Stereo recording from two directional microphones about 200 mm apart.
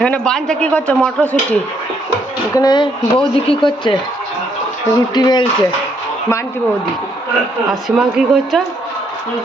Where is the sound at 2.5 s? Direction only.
20° left (ahead or behind).